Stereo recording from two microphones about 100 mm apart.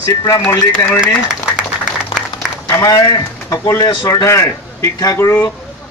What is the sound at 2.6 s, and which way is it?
A man's voice, 30° left (ahead or behind).